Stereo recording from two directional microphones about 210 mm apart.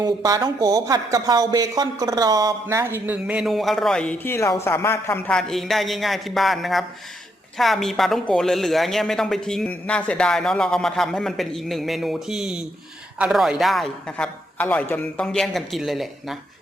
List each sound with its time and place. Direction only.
0.0 s speech: 15° right (ahead or behind); by 16.0 s centre (ahead or behind)